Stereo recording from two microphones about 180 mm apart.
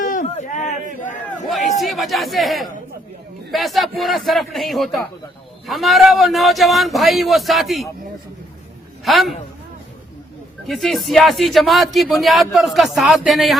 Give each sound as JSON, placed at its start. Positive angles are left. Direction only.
{"t": 0.0, "sound": "a sound", "side_deg": 45}
{"t": 1.5, "sound": "speech", "side_deg": 0}
{"t": 9.0, "sound": "speech", "side_deg": 0}
{"t": 10.7, "sound": "speech", "side_deg": 0}